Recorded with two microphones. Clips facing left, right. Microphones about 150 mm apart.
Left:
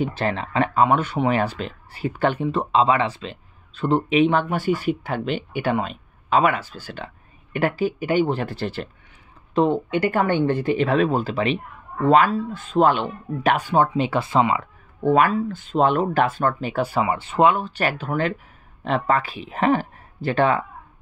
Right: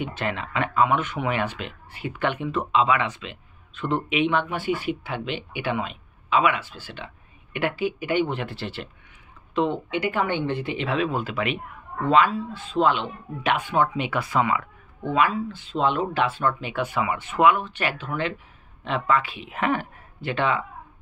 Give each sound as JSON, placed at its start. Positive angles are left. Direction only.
{"t": 0.0, "sound": "speech", "side_deg": 35}
{"t": 12.1, "sound": "speech", "side_deg": 45}
{"t": 15.0, "sound": "speech", "side_deg": 45}